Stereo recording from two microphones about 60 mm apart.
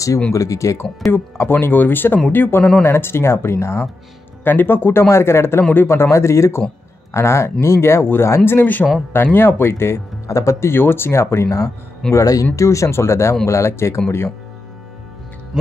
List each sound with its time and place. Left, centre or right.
0.3 s speech: left
1.1 s speech: left
4.5 s speech: left
10.2 s speech: left
10.7 s speech: left
12.1 s speech: left
15.5 s speech: centre